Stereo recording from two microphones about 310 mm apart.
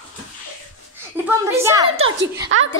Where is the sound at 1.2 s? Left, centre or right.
Centre.